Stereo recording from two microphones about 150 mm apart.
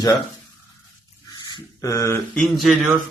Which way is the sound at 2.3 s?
Centre (ahead or behind).